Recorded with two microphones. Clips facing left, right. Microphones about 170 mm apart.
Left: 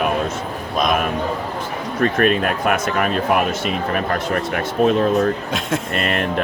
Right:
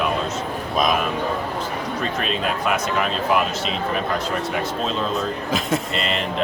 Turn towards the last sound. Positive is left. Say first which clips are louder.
# left 3 dB
turn(degrees=55)  # may be behind; listen again after turning